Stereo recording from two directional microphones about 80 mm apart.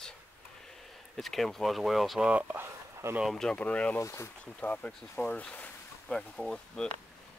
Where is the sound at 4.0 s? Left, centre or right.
Left.